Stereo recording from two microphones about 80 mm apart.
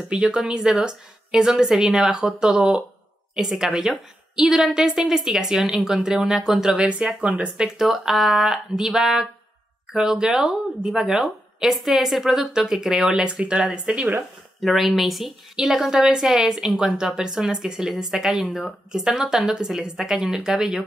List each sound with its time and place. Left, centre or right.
0.1 s a woman's voice: centre